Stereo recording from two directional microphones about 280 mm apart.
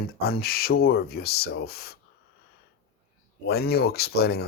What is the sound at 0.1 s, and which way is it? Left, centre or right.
Speech, left.